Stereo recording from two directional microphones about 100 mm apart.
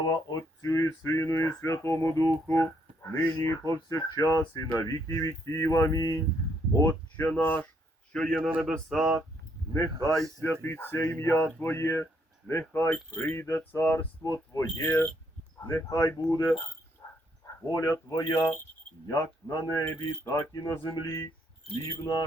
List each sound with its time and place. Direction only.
0.1 s speech: 40° left (ahead or behind)
2.5 s a sound: 30° left (ahead or behind)
3.4 s speech: 35° left (ahead or behind)
8.1 s a man's voice: 5° left (ahead or behind)
8.4 s speech: 10° right (ahead or behind)
8.7 s speech: 5° left (ahead or behind)
10.4 s speech: 20° left (ahead or behind)
15.7 s speech: 35° left (ahead or behind)
17.0 s a sound: 40° left (ahead or behind)
17.7 s speech: 35° left (ahead or behind)